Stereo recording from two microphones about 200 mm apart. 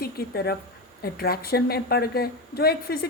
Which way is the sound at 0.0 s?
50° left (ahead or behind).